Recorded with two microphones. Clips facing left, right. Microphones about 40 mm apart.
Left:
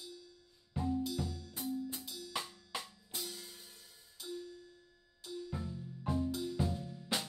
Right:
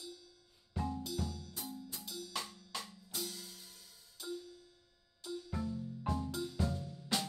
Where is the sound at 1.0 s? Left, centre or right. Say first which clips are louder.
Left 2 dB; centre.